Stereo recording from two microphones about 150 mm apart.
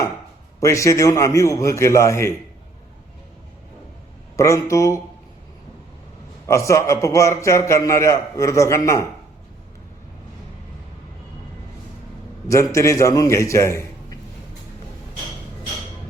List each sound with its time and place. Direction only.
0.6 s a man's voice: 20° left (ahead or behind)
4.4 s a man's voice: 20° left (ahead or behind)
6.5 s a man's voice: 20° left (ahead or behind)
12.5 s a man's voice: 20° left (ahead or behind)